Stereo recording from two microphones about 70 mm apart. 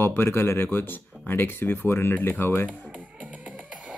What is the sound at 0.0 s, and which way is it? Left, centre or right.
Speech, left.